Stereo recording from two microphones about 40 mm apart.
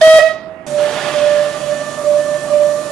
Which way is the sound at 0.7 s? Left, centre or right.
Centre.